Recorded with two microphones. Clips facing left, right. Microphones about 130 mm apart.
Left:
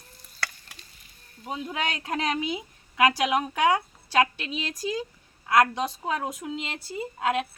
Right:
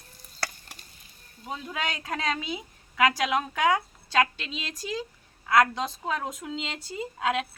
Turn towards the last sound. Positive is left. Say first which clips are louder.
# left 1 dB
turn(degrees=5)  # may be behind; listen again after turning